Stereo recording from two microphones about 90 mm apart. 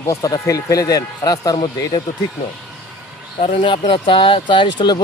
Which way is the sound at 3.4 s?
70° left (ahead or behind).